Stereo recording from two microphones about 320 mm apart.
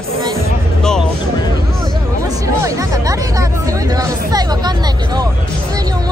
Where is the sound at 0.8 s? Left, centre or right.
Centre.